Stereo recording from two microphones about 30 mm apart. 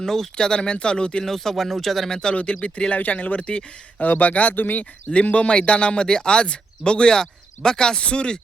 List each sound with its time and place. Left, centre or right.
0.0 s speech: centre
0.3 s speech: left
1.2 s speech: centre
2.0 s speech: left
2.3 s speech: left
2.9 s speech: left
4.0 s speech: left
4.8 s speech: left
7.1 s speech: left